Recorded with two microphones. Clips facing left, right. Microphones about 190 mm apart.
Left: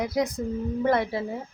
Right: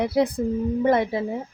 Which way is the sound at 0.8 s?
20° right (ahead or behind).